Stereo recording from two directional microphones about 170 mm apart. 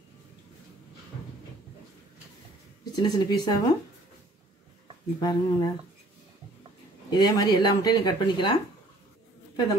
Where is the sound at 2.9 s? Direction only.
25° left (ahead or behind).